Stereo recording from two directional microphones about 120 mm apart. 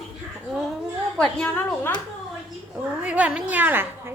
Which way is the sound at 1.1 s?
5° left (ahead or behind).